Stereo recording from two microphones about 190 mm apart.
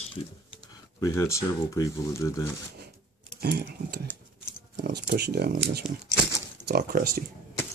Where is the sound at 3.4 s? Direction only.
55° right (ahead or behind).